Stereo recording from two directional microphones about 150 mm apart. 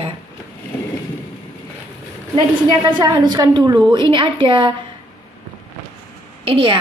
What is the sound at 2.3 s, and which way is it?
A woman's voice, 30° right (ahead or behind).